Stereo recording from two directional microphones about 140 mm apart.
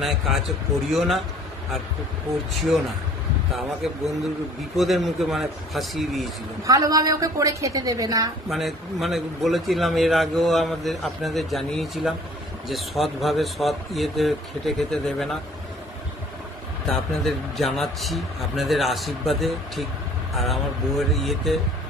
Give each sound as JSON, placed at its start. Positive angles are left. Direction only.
{"t": 0.0, "sound": "a man's voice", "side_deg": 0}
{"t": 3.5, "sound": "a man's voice", "side_deg": 0}
{"t": 6.6, "sound": "a woman's voice", "side_deg": -25}
{"t": 8.5, "sound": "a man's voice", "side_deg": 0}
{"t": 16.8, "sound": "a man's voice", "side_deg": 5}